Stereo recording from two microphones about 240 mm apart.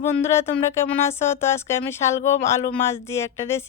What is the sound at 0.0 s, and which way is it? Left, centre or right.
Speech, centre.